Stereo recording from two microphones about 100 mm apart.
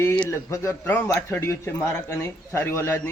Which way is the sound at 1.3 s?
25° left (ahead or behind).